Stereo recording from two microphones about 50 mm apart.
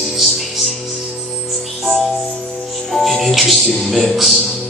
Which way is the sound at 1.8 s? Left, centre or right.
Centre.